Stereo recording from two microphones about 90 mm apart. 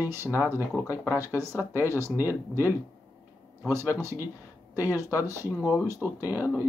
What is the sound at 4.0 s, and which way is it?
Speech, 30° right (ahead or behind).